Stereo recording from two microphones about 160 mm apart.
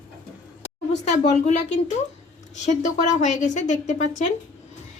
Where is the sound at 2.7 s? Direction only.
50° left (ahead or behind).